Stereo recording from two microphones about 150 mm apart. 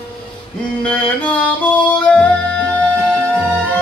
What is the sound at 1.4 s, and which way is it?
Music, 10° left (ahead or behind).